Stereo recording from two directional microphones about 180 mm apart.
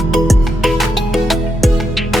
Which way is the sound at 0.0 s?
Centre (ahead or behind).